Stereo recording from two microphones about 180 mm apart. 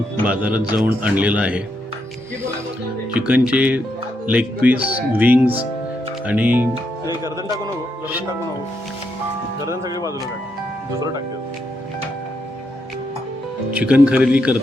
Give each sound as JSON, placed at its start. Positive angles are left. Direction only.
{"t": 0.3, "sound": "speech", "side_deg": -5}
{"t": 3.1, "sound": "speech", "side_deg": -5}
{"t": 9.6, "sound": "speech", "side_deg": -20}
{"t": 13.7, "sound": "speech", "side_deg": -5}